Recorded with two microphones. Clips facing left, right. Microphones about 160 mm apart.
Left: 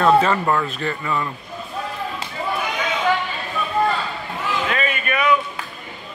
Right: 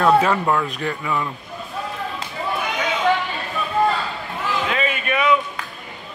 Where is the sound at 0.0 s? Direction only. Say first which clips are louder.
Even; 5° right (ahead or behind).